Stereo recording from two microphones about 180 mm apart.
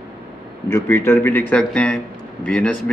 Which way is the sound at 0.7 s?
15° left (ahead or behind).